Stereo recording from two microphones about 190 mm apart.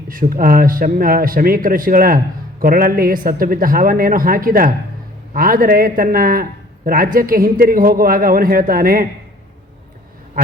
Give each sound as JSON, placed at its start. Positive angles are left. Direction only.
{"t": 0.1, "sound": "a man's voice", "side_deg": -45}